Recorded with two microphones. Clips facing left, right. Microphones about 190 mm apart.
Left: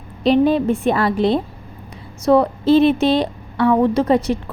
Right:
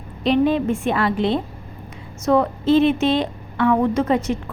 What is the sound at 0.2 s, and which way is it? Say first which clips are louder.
A woman's voice: left 3 dB; 35° left (ahead or behind).